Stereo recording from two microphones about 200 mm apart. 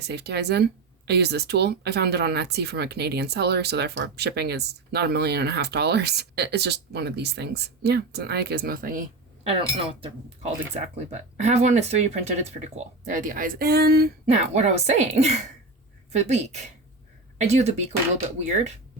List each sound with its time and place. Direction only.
0.0 s speech: 55° right (ahead or behind)
9.4 s speech: 30° right (ahead or behind); by 14.1 s 50° right (ahead or behind)
14.4 s speech: 35° right (ahead or behind)